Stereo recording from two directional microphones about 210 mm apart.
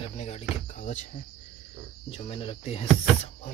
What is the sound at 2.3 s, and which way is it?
Speech, 25° left (ahead or behind).